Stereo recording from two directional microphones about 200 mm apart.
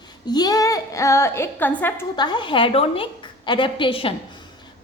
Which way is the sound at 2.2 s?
20° left (ahead or behind).